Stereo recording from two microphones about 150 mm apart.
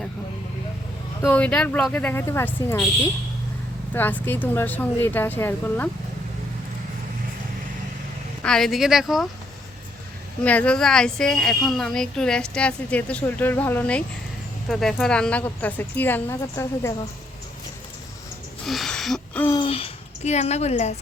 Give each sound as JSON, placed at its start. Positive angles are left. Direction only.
{"t": 1.3, "sound": "a woman's voice", "side_deg": 10}
{"t": 3.9, "sound": "a woman's voice", "side_deg": 15}
{"t": 8.4, "sound": "speech", "side_deg": 5}
{"t": 10.4, "sound": "a woman's voice", "side_deg": 10}
{"t": 18.6, "sound": "gasp", "side_deg": 0}
{"t": 19.6, "sound": "a sound", "side_deg": 40}